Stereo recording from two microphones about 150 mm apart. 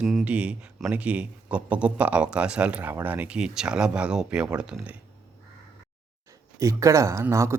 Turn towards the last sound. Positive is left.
turn(degrees=-20)  # may be behind; listen again after turning